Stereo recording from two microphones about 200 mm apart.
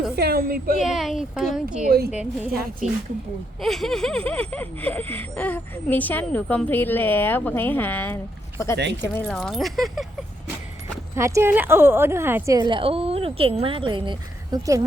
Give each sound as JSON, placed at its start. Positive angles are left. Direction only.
{"t": 0.2, "sound": "a woman's voice", "side_deg": -50}
{"t": 0.8, "sound": "speech", "side_deg": 0}
{"t": 9.2, "sound": "speech", "side_deg": 0}
{"t": 11.1, "sound": "a woman's voice", "side_deg": -15}